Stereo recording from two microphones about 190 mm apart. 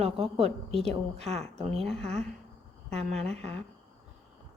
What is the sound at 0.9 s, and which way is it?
Speech, 35° right (ahead or behind).